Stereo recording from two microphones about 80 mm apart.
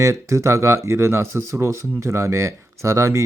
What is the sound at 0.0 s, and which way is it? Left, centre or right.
Speech, right.